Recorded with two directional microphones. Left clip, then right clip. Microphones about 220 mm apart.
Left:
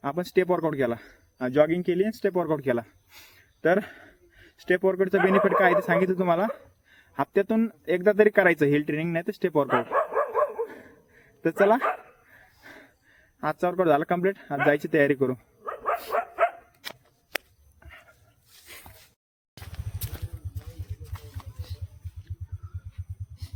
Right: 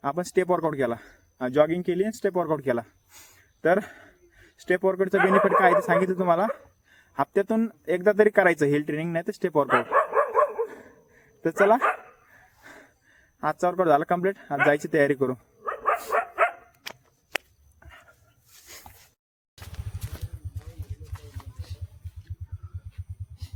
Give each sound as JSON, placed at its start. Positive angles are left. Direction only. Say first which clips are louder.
{"t": 0.0, "sound": "speech", "louder": "even", "side_deg": 5}
{"t": 3.6, "sound": "a sound", "louder": "right 1 dB", "side_deg": -5}
{"t": 5.1, "sound": "speech", "louder": "right 2 dB", "side_deg": -45}
{"t": 6.1, "sound": "speech", "louder": "right 1 dB", "side_deg": 0}
{"t": 9.6, "sound": "dog", "louder": "right 3 dB", "side_deg": -45}
{"t": 10.8, "sound": "a sound", "louder": "even", "side_deg": 5}
{"t": 11.8, "sound": "speech", "louder": "right 3 dB", "side_deg": -45}
{"t": 12.3, "sound": "a sound", "louder": "even", "side_deg": 0}
{"t": 14.7, "sound": "speech", "louder": "left 1 dB", "side_deg": 5}
{"t": 15.6, "sound": "dog", "louder": "right 3 dB", "side_deg": -45}
{"t": 16.8, "sound": "scissors", "louder": "left 2 dB", "side_deg": 0}
{"t": 18.6, "sound": "a sound", "louder": "left 1 dB", "side_deg": -5}